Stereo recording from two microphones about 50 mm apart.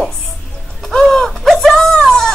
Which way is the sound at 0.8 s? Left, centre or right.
Centre.